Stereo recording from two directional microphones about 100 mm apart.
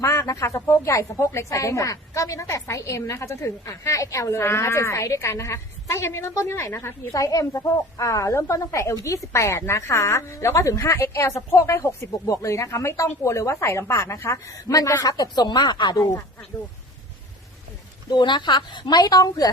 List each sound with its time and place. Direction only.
0.0 s a woman's voice: 30° left (ahead or behind); by 16.0 s 45° left (ahead or behind)
18.1 s speech: 50° left (ahead or behind)